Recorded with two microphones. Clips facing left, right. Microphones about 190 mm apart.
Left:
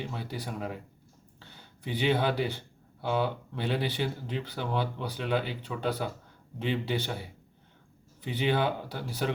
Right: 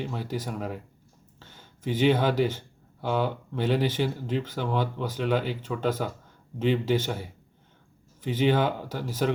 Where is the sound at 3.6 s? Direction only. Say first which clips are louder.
Right 5 dB; 45° right (ahead or behind).